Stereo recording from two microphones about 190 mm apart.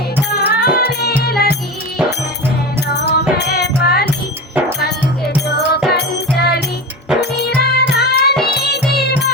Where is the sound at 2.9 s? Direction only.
60° left (ahead or behind).